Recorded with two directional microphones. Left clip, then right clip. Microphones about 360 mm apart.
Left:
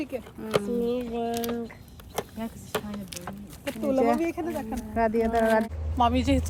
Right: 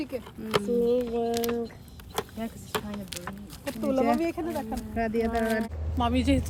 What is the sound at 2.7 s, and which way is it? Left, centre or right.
Speech, centre.